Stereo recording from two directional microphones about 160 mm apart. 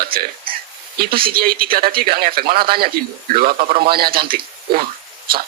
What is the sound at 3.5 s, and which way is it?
Speech, 35° right (ahead or behind).